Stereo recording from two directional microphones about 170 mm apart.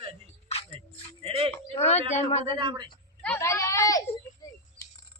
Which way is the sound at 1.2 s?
35° right (ahead or behind).